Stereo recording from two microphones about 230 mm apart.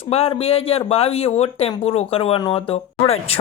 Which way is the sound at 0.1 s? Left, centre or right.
Left.